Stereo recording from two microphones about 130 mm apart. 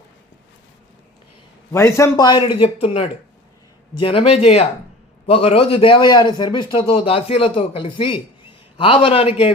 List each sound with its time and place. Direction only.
1.7 s a man's voice: 25° left (ahead or behind)
2.4 s a man's voice: 45° left (ahead or behind)